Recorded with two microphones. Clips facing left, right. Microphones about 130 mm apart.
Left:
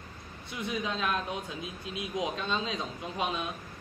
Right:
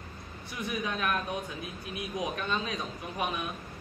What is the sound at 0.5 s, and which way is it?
A man's voice, 20° left (ahead or behind).